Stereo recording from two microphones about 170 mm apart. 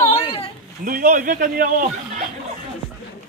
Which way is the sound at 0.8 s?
50° right (ahead or behind).